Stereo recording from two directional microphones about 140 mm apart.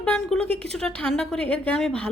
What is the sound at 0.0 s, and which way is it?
A woman's voice, 5° left (ahead or behind).